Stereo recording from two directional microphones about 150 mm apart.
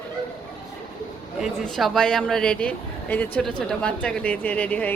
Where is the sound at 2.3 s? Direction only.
5° left (ahead or behind).